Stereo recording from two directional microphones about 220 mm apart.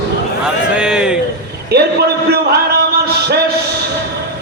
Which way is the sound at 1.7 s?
45° right (ahead or behind).